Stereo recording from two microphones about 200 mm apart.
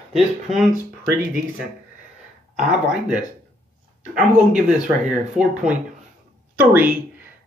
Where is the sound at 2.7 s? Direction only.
5° right (ahead or behind).